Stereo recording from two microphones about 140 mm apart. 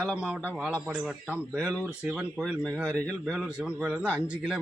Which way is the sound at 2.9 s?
5° left (ahead or behind).